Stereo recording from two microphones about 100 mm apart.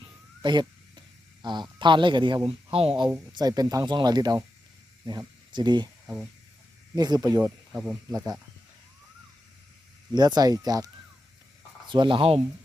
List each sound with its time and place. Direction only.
0.0 s a sound: 50° right (ahead or behind)
2.7 s speech: 70° right (ahead or behind)
3.3 s speech: 40° right (ahead or behind)
6.9 s speech: 40° right (ahead or behind)
10.2 s speech: 45° right (ahead or behind)
11.9 s speech: 55° right (ahead or behind)